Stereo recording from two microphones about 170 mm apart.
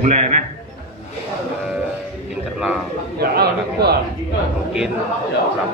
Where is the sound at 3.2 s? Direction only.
70° right (ahead or behind).